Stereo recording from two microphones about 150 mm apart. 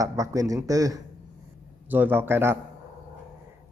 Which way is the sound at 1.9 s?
10° right (ahead or behind).